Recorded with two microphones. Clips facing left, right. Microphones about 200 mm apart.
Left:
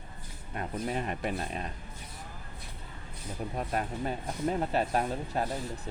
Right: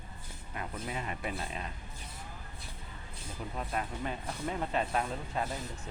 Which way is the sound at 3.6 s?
40° left (ahead or behind).